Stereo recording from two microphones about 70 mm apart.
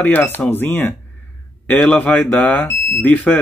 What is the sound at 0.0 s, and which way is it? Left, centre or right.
Speech, left.